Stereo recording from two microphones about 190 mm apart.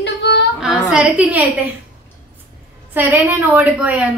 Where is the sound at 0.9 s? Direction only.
5° right (ahead or behind).